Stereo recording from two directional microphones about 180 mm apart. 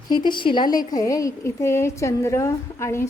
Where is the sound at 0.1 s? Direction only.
25° left (ahead or behind).